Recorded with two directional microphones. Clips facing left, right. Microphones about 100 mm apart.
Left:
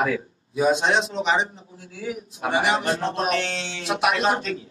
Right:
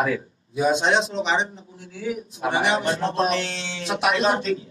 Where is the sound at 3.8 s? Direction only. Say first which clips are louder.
Right 1 dB; 30° right (ahead or behind).